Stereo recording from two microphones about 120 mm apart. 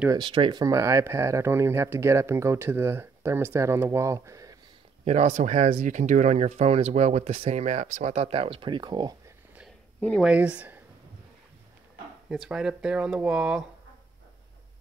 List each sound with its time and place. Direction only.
0.2 s speech: 45° right (ahead or behind); by 4.6 s 25° right (ahead or behind)
5.0 s speech: 75° right (ahead or behind); by 9.1 s 35° right (ahead or behind)
9.9 s speech: 10° left (ahead or behind)
10.2 s speech: 10° right (ahead or behind)
12.3 s speech: 5° right (ahead or behind)